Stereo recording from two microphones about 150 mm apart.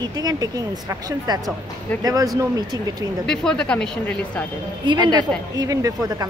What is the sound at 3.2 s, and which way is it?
Speech, 5° left (ahead or behind).